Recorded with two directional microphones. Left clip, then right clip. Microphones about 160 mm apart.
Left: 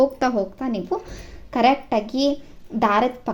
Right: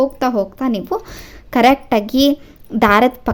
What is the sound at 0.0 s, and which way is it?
Speech, 20° right (ahead or behind).